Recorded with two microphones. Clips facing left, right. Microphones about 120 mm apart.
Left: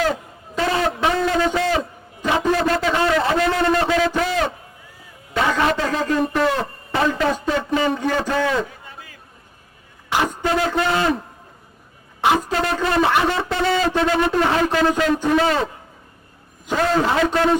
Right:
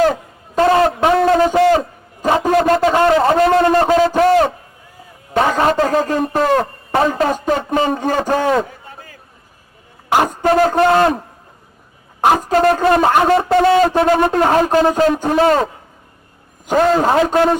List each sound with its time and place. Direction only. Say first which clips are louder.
0.5 s a man's voice: right 8 dB; 45° right (ahead or behind)
7.0 s a man's voice: right 3 dB; 40° right (ahead or behind)
12.2 s a man's voice: right 6 dB; 45° right (ahead or behind)